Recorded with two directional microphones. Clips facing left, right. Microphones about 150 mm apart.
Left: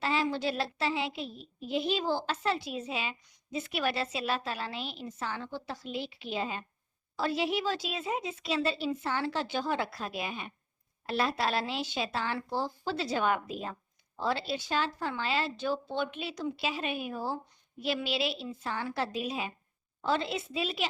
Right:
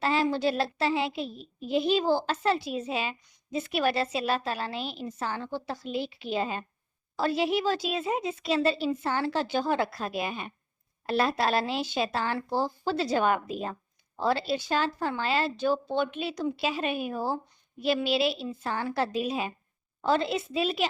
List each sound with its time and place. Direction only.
0.0 s a child's voice: 40° right (ahead or behind)